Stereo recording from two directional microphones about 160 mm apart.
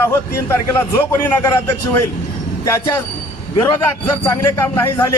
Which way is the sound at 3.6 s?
20° left (ahead or behind).